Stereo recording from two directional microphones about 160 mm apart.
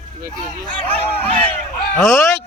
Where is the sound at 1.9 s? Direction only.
15° left (ahead or behind).